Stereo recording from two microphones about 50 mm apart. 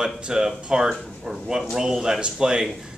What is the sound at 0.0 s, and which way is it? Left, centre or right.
Speech, centre.